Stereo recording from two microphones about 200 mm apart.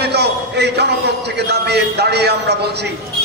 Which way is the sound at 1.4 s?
55° right (ahead or behind).